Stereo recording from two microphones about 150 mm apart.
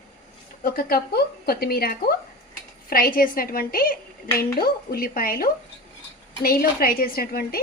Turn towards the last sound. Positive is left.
turn(degrees=90)